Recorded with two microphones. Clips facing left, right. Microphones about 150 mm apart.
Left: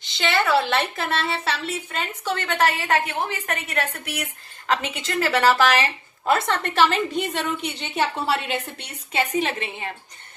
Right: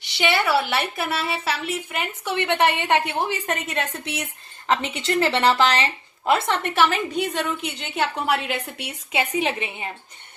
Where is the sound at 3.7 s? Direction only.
25° right (ahead or behind).